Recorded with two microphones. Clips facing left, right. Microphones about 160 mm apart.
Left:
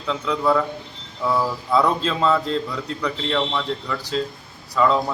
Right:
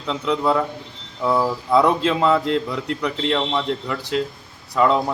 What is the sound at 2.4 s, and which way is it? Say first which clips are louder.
Speech: right 3 dB; 75° right (ahead or behind).